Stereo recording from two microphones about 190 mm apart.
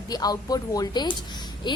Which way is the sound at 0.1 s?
20° left (ahead or behind).